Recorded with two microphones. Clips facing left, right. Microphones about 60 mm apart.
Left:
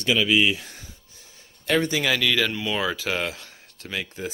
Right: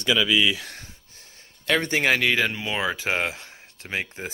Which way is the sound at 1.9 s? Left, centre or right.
Right.